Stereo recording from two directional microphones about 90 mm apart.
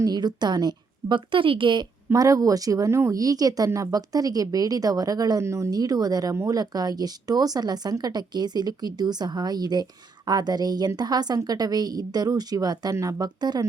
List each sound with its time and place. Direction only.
0.0 s a woman's voice: 50° right (ahead or behind)
2.1 s speech: 40° right (ahead or behind)
3.2 s a woman's voice: 45° right (ahead or behind)
5.4 s speech: 30° right (ahead or behind)
5.7 s a woman's voice: 45° right (ahead or behind)